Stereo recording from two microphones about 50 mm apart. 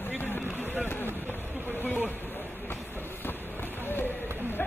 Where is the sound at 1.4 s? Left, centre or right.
Right.